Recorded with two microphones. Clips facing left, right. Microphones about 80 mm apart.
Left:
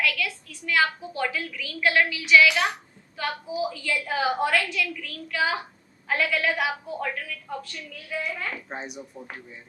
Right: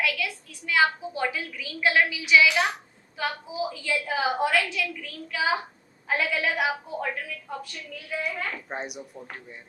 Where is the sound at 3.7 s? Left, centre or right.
Centre.